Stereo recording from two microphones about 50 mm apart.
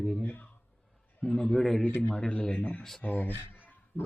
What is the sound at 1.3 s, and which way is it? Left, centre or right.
Speech, centre.